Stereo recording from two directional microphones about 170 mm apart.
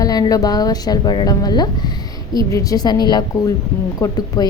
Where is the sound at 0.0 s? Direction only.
20° left (ahead or behind).